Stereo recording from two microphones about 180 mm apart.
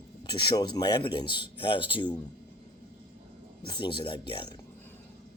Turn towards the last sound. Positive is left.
turn(degrees=30)  # may be behind; listen again after turning